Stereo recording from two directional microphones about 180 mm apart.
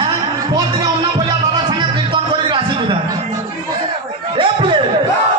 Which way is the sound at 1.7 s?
25° right (ahead or behind).